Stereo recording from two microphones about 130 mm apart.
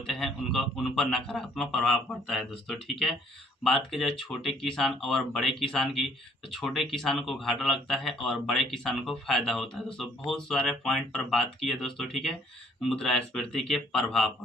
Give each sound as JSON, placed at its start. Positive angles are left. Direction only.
{"t": 0.0, "sound": "a man's voice", "side_deg": 0}